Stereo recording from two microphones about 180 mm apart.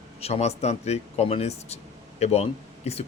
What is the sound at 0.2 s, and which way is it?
Speech, 35° left (ahead or behind).